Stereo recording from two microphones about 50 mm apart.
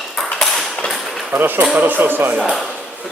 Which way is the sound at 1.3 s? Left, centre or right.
Right.